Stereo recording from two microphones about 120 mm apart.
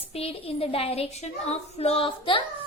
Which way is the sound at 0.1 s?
55° left (ahead or behind).